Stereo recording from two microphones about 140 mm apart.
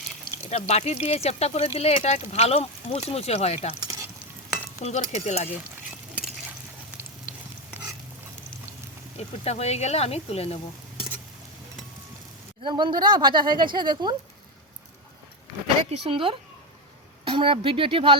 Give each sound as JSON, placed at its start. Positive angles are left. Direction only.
{"t": 0.5, "sound": "speech", "side_deg": 50}
{"t": 3.8, "sound": "frying", "side_deg": -25}
{"t": 4.8, "sound": "speech", "side_deg": 55}
{"t": 9.1, "sound": "speech", "side_deg": 50}
{"t": 12.6, "sound": "speech", "side_deg": -35}
{"t": 15.9, "sound": "speech", "side_deg": -40}